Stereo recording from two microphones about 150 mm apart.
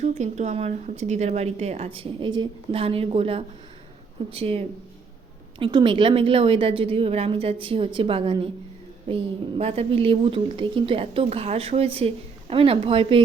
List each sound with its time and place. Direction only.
0.0 s speech: 50° right (ahead or behind); by 8.4 s 35° right (ahead or behind)
9.6 s speech: 40° right (ahead or behind)